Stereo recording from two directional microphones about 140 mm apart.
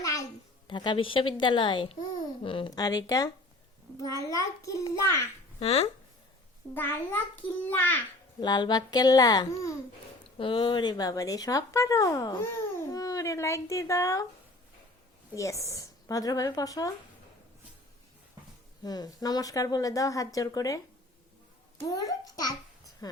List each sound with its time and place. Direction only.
0.0 s a sound: 25° left (ahead or behind)
0.7 s a woman's voice: 35° left (ahead or behind)
5.5 s speech: 45° left (ahead or behind)
6.7 s a child's voice: 15° left (ahead or behind)
8.4 s speech: 30° left (ahead or behind)
10.3 s speech: 40° left (ahead or behind); by 14.3 s 20° left (ahead or behind)
15.4 s speech: 20° left (ahead or behind)
18.9 s speech: 30° left (ahead or behind)
21.8 s speech: 25° left (ahead or behind)